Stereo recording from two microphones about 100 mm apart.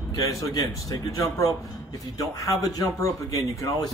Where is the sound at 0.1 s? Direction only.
35° left (ahead or behind).